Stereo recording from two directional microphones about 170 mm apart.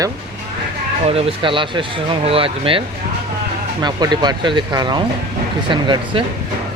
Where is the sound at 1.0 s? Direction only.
35° right (ahead or behind).